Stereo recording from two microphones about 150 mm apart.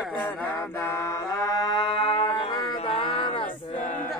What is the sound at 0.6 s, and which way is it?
Music, 15° left (ahead or behind).